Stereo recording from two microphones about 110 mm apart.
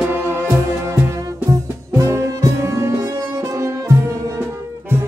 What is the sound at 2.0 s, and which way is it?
Brass instrument, 25° right (ahead or behind).